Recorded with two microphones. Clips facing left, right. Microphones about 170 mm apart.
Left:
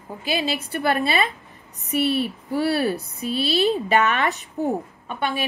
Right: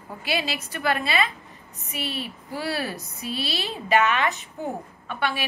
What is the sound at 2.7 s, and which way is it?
Speech, 30° left (ahead or behind).